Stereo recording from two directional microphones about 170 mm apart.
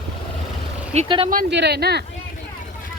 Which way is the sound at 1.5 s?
80° right.